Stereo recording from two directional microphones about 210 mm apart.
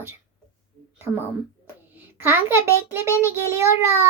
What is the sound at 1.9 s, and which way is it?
Speech, 10° right (ahead or behind).